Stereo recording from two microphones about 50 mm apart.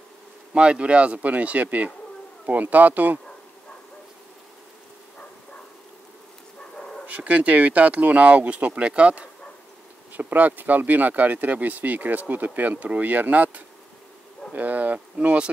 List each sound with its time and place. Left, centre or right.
0.6 s speech: right
6.8 s bird: centre
7.1 s speech: right
10.1 s speech: right